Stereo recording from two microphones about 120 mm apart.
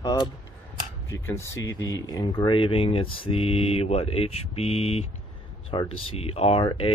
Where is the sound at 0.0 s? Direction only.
35° left (ahead or behind).